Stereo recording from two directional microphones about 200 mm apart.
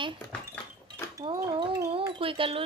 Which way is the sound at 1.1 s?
25° right (ahead or behind).